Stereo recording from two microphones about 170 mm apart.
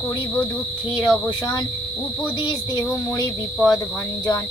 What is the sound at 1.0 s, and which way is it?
Speech, 25° left (ahead or behind).